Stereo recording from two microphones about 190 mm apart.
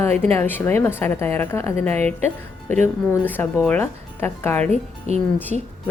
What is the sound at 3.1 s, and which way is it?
Speech, 10° left (ahead or behind).